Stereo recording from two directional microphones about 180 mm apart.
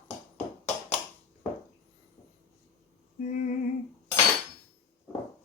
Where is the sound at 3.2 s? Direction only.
45° left (ahead or behind).